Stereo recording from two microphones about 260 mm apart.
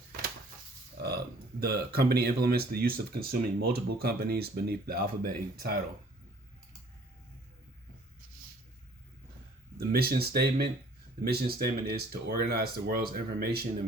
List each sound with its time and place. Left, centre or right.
0.9 s speech: right
9.7 s speech: right